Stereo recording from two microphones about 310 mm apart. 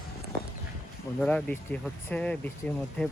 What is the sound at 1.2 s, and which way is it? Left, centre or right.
Speech, centre.